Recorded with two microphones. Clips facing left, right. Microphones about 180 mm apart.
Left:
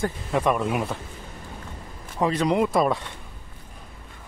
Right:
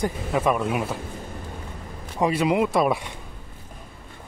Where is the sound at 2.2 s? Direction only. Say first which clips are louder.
Right 1 dB; 10° right (ahead or behind).